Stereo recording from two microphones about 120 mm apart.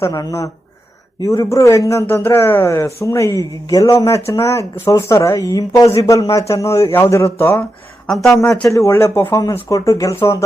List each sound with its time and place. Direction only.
0.0 s a man's voice: 30° left (ahead or behind)
8.0 s speech: centre (ahead or behind)
8.3 s a man's voice: 25° left (ahead or behind)